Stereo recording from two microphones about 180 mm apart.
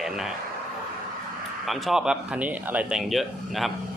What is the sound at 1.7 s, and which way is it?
Speech, centre (ahead or behind).